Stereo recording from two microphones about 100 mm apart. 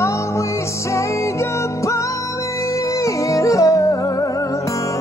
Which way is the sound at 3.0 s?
30° left (ahead or behind).